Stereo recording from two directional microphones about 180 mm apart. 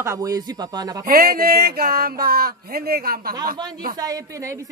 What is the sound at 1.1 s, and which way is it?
Speech, 55° right (ahead or behind).